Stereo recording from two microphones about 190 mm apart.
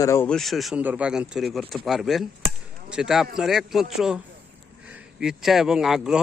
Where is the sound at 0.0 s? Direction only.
15° left (ahead or behind).